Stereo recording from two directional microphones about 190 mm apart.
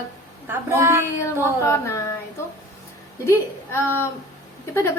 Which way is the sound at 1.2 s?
15° left (ahead or behind).